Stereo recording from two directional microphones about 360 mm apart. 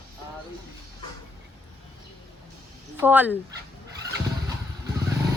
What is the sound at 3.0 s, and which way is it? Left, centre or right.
Speech, centre.